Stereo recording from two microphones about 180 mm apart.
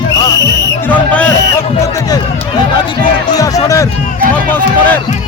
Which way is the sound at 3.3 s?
20° left (ahead or behind).